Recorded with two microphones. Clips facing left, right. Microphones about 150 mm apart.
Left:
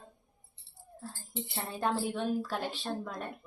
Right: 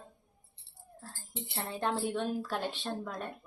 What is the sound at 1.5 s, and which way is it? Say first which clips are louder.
Speech: left 1 dB; centre (ahead or behind).